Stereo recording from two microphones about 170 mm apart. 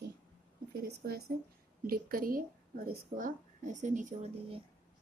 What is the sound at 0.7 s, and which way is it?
A woman's voice, 65° right (ahead or behind).